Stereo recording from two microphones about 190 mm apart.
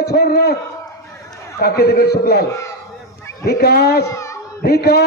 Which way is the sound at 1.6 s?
55° left (ahead or behind).